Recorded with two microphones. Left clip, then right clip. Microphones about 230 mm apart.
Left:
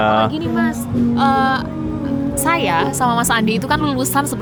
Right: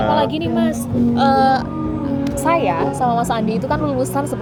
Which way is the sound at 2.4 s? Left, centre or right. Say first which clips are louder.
Even; left.